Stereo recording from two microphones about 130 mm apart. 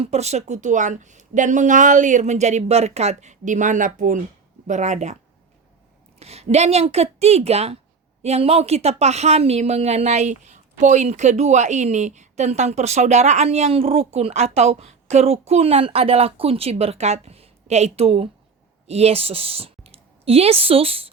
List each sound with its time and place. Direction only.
0.0 s speech: 55° right (ahead or behind); by 4.2 s 85° right
4.6 s a woman's voice: 65° right (ahead or behind)
6.1 s a woman's voice: 55° right (ahead or behind)